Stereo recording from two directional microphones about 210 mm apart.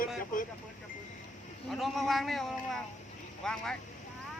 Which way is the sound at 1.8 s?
Centre (ahead or behind).